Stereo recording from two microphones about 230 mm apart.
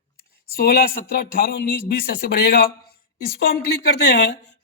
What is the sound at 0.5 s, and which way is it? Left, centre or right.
A man's voice, left.